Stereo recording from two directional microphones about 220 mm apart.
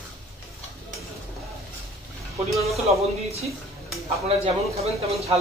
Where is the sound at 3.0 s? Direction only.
30° right (ahead or behind).